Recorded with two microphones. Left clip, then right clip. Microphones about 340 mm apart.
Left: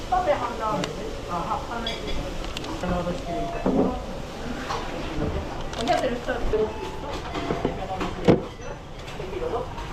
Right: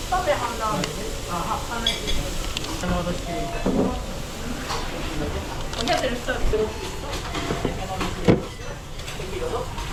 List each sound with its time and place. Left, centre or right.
0.1 s speech: centre
2.6 s a sound: centre
3.6 s speech: centre
5.7 s speech: centre
7.3 s vehicle: centre